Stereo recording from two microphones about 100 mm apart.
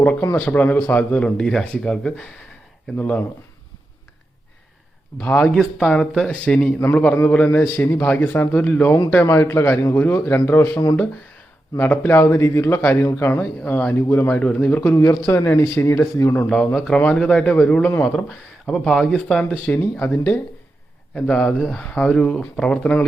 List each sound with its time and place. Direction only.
0.0 s speech: 15° left (ahead or behind)
5.2 s a man's voice: 15° left (ahead or behind)
15.3 s a man's voice: 30° left (ahead or behind)
16.7 s speech: 5° left (ahead or behind)
19.5 s speech: 15° left (ahead or behind)